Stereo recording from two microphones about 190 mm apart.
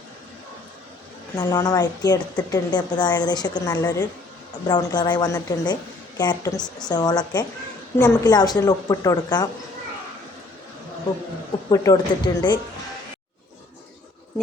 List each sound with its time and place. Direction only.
1.4 s speech: 20° left (ahead or behind)
11.7 s speech: 15° left (ahead or behind)